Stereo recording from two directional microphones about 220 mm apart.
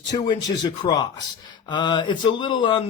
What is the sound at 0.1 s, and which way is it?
Speech, 20° left (ahead or behind).